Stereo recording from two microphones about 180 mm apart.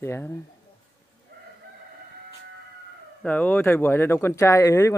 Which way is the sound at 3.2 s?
10° left (ahead or behind).